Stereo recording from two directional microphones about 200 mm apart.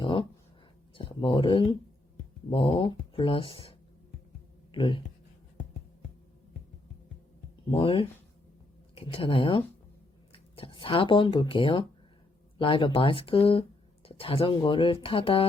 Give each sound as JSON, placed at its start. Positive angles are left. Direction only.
{"t": 0.0, "sound": "a sound", "side_deg": 25}
{"t": 0.9, "sound": "speech", "side_deg": 25}
{"t": 7.7, "sound": "speech", "side_deg": 25}